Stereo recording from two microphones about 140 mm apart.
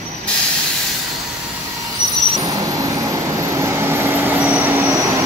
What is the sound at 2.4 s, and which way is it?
Vehicle, 25° right (ahead or behind).